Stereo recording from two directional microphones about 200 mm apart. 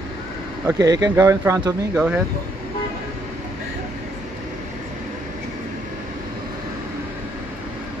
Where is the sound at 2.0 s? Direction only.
5° right (ahead or behind).